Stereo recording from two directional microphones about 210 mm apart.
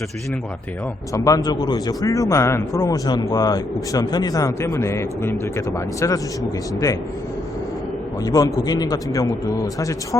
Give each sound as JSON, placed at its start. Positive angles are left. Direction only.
{"t": 1.1, "sound": "speech", "side_deg": 15}
{"t": 8.2, "sound": "speech", "side_deg": 15}